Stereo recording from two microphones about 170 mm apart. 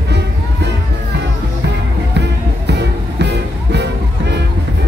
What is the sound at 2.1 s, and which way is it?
Music, 85° right.